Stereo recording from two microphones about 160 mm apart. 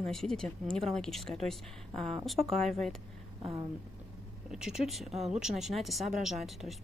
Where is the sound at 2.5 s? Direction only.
Centre (ahead or behind).